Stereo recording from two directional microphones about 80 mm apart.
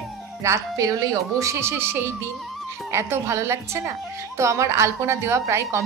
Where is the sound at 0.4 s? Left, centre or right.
Right.